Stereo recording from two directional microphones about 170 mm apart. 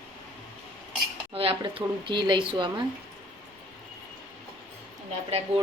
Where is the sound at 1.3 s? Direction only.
30° right (ahead or behind).